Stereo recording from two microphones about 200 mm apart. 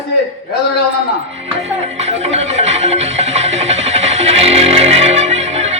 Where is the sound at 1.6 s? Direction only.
30° right (ahead or behind).